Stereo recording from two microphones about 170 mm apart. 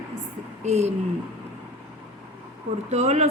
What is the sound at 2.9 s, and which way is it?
Speech, 40° right (ahead or behind).